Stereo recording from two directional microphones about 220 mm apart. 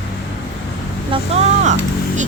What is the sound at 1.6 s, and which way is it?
Speech, 35° right (ahead or behind).